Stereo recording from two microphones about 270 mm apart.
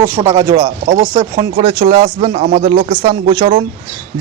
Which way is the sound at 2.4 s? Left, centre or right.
Right.